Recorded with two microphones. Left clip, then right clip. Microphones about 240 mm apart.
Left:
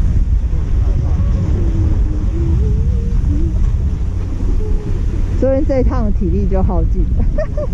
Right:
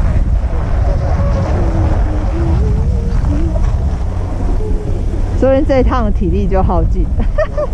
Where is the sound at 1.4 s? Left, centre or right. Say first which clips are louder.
Right 3 dB; left.